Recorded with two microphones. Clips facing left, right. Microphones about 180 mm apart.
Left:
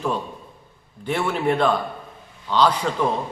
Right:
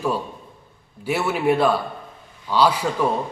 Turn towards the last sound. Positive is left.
turn(degrees=-10)  # may be behind; listen again after turning